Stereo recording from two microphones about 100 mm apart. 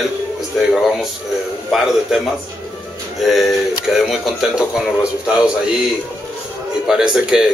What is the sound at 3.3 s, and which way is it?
Speech, centre (ahead or behind).